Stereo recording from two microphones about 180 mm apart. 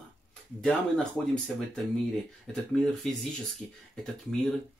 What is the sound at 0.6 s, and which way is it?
Speech, 5° left (ahead or behind).